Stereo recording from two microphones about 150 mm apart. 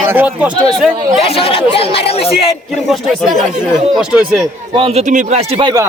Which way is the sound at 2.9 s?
Centre (ahead or behind).